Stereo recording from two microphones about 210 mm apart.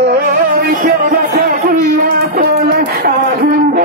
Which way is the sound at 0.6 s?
40° right (ahead or behind).